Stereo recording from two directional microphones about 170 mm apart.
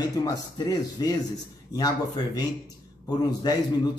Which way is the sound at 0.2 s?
20° left (ahead or behind).